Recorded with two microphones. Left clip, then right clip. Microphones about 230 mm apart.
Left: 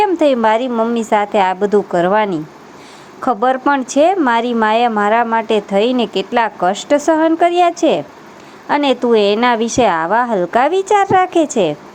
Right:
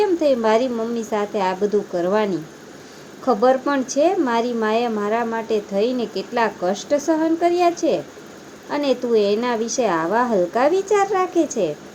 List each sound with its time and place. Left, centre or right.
0.0 s speech: left